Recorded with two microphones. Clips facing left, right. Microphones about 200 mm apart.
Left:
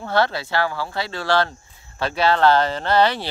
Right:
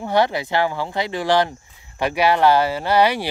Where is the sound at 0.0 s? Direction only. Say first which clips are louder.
Right 2 dB; 15° right (ahead or behind).